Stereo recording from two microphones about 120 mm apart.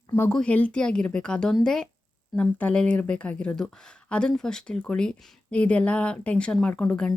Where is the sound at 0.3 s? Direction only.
10° left (ahead or behind).